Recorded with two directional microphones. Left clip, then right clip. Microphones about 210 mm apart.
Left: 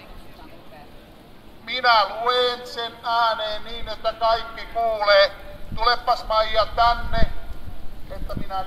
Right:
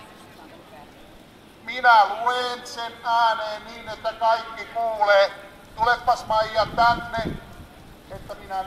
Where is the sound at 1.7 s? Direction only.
20° left (ahead or behind).